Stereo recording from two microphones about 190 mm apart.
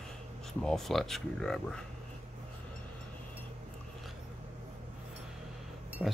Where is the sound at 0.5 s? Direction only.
Centre (ahead or behind).